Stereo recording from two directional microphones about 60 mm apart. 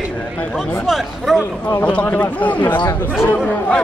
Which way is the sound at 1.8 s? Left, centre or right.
Left.